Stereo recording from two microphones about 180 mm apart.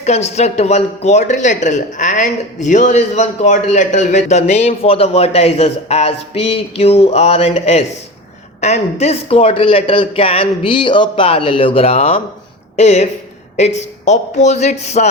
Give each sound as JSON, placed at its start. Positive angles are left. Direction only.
{"t": 0.0, "sound": "speech", "side_deg": 35}